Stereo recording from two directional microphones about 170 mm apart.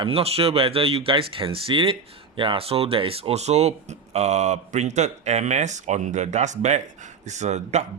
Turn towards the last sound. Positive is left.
turn(degrees=-40)  # may be behind; listen again after turning